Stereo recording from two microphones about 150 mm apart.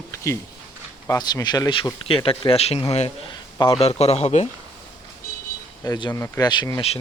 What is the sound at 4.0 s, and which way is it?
Speech, 45° left (ahead or behind).